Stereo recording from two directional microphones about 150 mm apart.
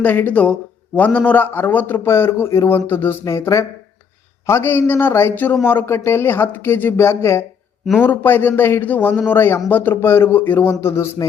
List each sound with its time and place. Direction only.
0.0 s a man's voice: 10° left (ahead or behind)